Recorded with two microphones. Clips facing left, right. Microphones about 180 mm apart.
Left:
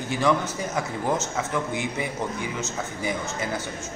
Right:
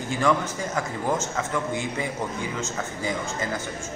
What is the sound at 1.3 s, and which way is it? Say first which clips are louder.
A man's voice: even; 20° left (ahead or behind).